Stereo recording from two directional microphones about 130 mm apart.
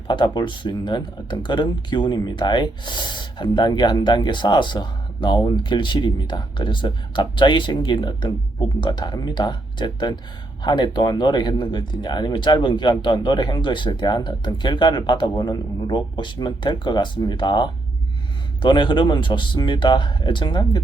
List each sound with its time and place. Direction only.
0.1 s speech: 35° left (ahead or behind)